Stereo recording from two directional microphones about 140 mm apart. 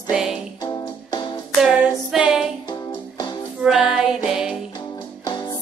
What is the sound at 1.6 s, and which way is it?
Female singing, 5° right (ahead or behind).